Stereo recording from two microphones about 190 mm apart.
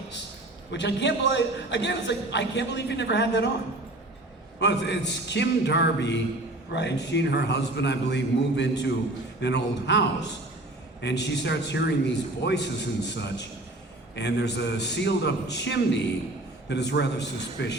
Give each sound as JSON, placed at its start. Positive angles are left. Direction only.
{"t": 0.7, "sound": "a man's voice", "side_deg": 65}
{"t": 4.6, "sound": "a man's voice", "side_deg": 65}
{"t": 11.0, "sound": "a man's voice", "side_deg": 65}